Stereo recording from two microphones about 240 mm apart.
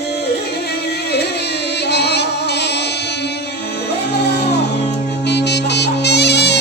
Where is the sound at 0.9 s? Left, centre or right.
Left.